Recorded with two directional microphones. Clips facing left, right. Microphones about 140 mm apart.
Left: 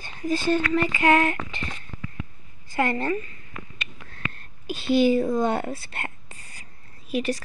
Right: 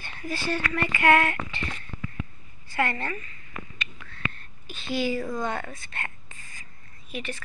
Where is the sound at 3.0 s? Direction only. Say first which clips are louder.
Left 8 dB; 25° left (ahead or behind).